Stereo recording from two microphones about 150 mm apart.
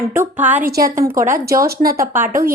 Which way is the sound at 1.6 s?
90° right.